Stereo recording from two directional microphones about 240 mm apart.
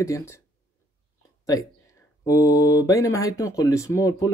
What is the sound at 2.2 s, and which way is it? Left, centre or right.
Speech, centre.